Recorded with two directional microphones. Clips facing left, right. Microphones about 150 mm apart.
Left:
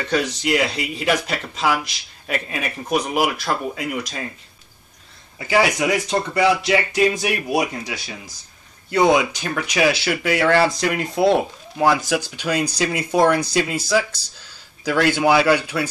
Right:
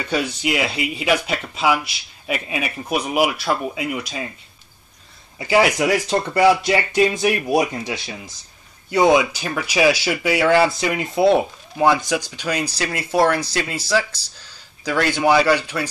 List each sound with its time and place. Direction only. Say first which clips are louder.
0.0 s speech: left 1 dB; 10° right (ahead or behind)
5.4 s speech: right 2 dB; 20° right (ahead or behind)
6.0 s speech: right 4 dB; 30° right (ahead or behind)
8.9 s speech: right 1 dB; 10° right (ahead or behind); by 15.9 s 10° left (ahead or behind)